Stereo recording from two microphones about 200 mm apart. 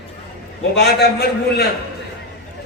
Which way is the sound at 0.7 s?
55° left (ahead or behind).